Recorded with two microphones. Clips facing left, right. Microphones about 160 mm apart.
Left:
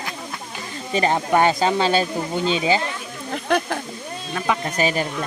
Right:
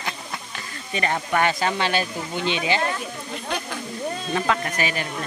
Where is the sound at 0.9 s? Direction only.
30° left (ahead or behind).